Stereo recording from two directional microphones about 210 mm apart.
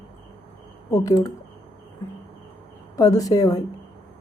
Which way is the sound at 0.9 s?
15° left (ahead or behind).